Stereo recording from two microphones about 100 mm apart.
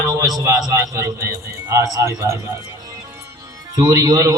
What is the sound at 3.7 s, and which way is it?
Speech, 35° right (ahead or behind).